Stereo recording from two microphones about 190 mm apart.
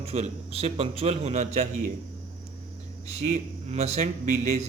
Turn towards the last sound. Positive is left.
turn(degrees=-40)  # may be behind; listen again after turning